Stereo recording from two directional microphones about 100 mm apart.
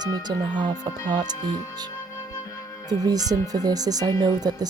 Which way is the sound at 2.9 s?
40° right (ahead or behind).